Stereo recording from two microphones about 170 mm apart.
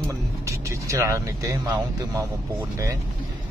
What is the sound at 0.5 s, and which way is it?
Speech, 15° right (ahead or behind).